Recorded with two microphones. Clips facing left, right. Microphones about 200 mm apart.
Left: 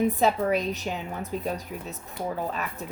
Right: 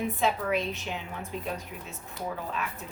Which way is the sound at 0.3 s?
40° left (ahead or behind).